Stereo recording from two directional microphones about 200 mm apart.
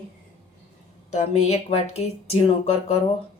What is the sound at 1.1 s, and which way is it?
A woman's voice, 35° left (ahead or behind).